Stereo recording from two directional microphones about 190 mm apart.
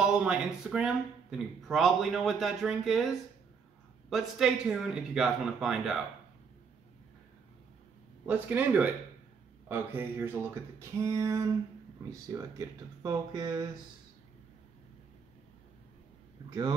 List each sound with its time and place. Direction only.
0.0 s speech: 5° right (ahead or behind)
8.3 s speech: 10° right (ahead or behind)
16.4 s speech: 20° right (ahead or behind)